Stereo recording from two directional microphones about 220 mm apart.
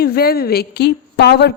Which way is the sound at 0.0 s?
45° left (ahead or behind).